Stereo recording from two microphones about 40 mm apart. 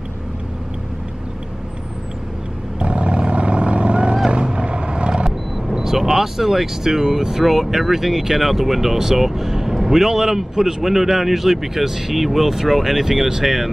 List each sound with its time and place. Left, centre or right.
2.8 s vehicle: right
5.7 s speech: centre